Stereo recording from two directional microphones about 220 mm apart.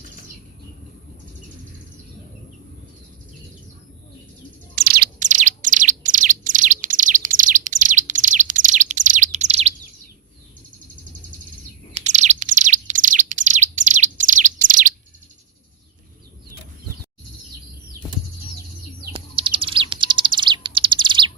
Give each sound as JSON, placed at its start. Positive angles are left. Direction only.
{"t": 4.7, "sound": "bird", "side_deg": -45}
{"t": 11.9, "sound": "bird", "side_deg": -30}
{"t": 19.1, "sound": "bird", "side_deg": -25}